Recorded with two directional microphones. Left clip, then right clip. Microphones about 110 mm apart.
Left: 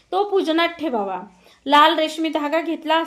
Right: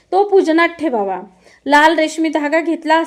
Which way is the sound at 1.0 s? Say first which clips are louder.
Right 6 dB; 30° right (ahead or behind).